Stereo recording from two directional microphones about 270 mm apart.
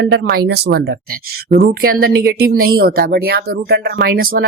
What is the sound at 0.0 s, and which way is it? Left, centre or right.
Speech, right.